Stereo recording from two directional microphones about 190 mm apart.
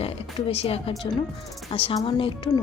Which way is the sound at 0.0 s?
30° left (ahead or behind).